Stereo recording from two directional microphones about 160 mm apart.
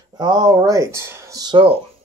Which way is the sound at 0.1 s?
25° right (ahead or behind).